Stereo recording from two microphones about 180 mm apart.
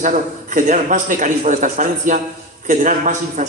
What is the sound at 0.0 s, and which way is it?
A man's voice, 45° right (ahead or behind).